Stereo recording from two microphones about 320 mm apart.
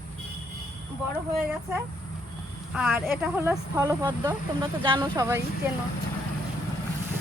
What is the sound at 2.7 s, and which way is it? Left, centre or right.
Speech, centre.